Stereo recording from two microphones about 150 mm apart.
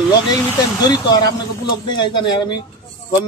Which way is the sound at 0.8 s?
25° left (ahead or behind).